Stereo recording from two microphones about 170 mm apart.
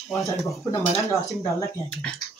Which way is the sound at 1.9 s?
5° left (ahead or behind).